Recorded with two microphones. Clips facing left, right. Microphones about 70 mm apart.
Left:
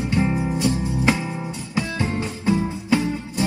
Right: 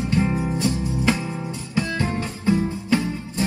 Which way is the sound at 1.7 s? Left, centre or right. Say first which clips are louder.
Right 1 dB; left.